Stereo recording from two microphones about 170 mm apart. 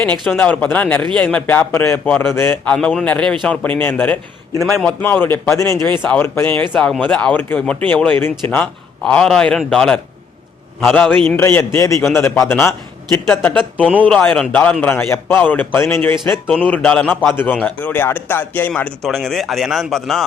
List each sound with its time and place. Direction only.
0.0 s a man's voice: 5° left (ahead or behind)
5.0 s a man's voice: 10° left (ahead or behind)